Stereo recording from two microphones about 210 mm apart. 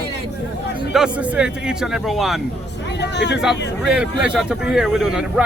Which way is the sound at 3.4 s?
5° right (ahead or behind).